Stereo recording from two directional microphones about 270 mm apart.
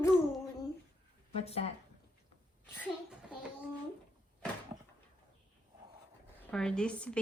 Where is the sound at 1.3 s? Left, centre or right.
Left.